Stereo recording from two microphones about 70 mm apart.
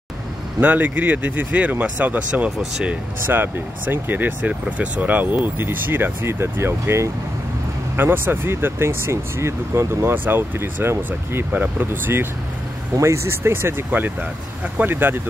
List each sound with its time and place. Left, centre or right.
0.6 s speech: right
13.0 s speech: right